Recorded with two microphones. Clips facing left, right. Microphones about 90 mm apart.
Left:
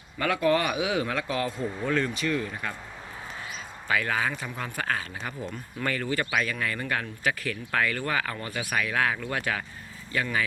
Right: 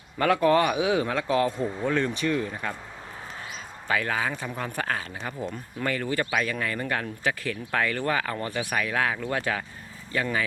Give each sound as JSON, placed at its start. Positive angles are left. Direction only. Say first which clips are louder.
{"t": 0.2, "sound": "speech", "louder": "right 3 dB", "side_deg": -35}
{"t": 3.8, "sound": "speech", "louder": "even", "side_deg": -30}